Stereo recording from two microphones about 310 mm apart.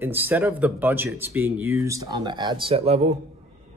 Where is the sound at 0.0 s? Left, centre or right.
Centre.